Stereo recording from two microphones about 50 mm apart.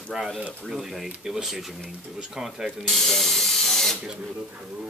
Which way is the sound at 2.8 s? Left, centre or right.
Centre.